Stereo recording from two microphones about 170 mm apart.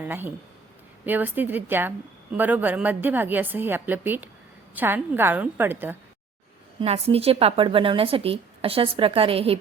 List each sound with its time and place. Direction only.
0.0 s a woman's voice: 10° right (ahead or behind)
6.7 s a woman's voice: 35° right (ahead or behind)